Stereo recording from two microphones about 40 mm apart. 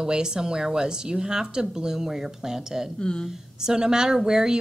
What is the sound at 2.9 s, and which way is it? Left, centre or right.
Speech, left.